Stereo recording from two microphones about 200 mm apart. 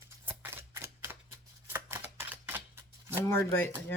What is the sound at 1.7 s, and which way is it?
Camera, 10° right (ahead or behind).